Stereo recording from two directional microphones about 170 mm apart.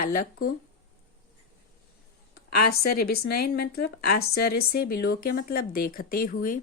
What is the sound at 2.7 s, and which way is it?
A woman's voice, 65° left (ahead or behind).